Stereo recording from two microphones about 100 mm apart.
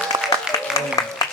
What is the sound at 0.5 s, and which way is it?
Applause, 30° left (ahead or behind).